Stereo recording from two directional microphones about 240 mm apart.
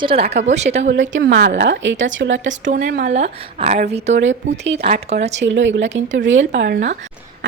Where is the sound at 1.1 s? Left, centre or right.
Right.